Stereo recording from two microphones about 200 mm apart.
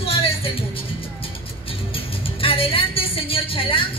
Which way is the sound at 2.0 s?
30° left (ahead or behind).